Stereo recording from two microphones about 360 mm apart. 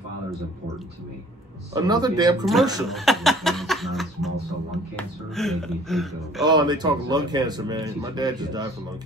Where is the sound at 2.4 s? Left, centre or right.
Centre.